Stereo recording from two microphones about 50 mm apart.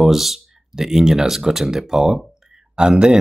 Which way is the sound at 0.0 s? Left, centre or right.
Centre.